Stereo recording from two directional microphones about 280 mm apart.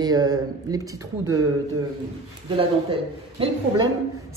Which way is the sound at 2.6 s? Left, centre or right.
Centre.